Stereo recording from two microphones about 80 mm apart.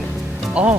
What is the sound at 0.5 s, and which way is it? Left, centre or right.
Speech, centre.